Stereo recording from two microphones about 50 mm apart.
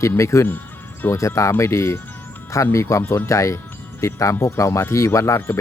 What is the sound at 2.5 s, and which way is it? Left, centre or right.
Speech, left.